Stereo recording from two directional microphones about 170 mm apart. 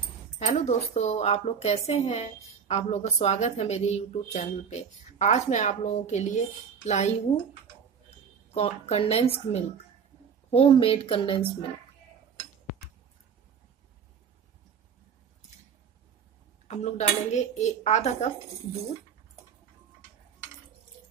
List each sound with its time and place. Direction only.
0.4 s a woman's voice: 40° left (ahead or behind)
8.5 s a woman's voice: 35° left (ahead or behind)
16.6 s a woman's voice: 40° left (ahead or behind)